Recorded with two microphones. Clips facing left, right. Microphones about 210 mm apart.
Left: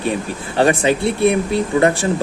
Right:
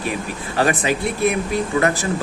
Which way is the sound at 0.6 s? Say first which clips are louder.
Left 4 dB; 30° left (ahead or behind).